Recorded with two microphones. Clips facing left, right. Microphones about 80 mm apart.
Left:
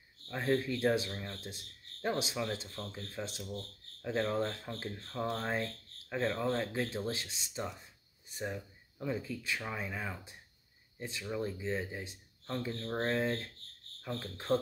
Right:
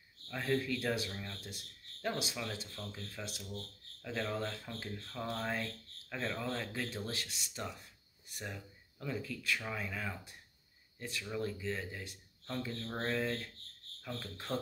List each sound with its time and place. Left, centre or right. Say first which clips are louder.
0.3 s speech: left 3 dB; left